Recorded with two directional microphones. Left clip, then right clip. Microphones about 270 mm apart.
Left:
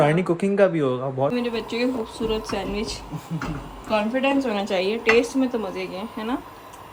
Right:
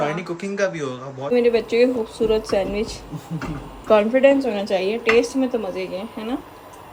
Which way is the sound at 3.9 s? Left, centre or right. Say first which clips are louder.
Right 6 dB; centre.